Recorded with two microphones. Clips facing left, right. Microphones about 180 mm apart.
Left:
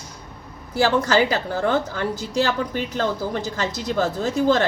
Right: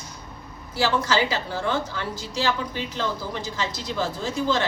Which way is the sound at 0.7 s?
45° left (ahead or behind).